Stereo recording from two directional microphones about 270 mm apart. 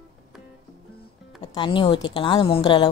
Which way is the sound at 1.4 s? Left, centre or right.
Centre.